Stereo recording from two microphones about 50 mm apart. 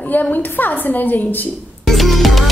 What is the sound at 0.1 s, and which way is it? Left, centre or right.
A woman's voice, left.